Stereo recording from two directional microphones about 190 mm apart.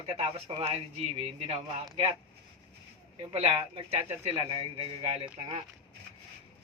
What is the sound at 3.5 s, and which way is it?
Speech, 30° right (ahead or behind).